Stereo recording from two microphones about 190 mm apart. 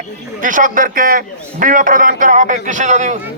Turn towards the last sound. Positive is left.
turn(degrees=-40)  # may be behind; listen again after turning